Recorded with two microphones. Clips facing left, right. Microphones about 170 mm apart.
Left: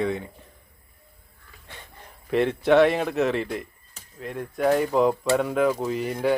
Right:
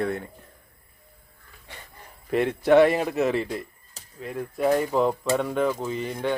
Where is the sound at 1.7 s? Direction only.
10° right (ahead or behind).